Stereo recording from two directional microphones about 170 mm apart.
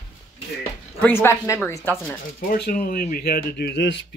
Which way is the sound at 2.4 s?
60° left (ahead or behind).